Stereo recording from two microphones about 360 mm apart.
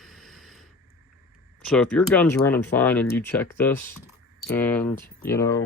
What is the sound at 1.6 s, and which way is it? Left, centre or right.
Speech, centre.